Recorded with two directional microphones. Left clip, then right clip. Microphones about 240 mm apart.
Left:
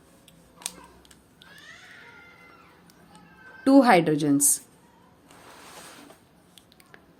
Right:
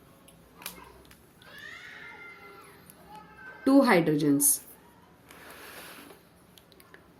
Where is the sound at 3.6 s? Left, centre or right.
Left.